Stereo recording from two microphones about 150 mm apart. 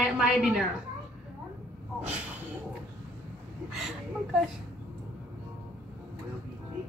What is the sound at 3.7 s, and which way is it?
Speech, 5° right (ahead or behind).